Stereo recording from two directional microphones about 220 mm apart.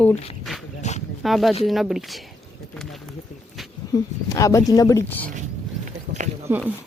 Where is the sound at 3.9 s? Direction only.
15° left (ahead or behind).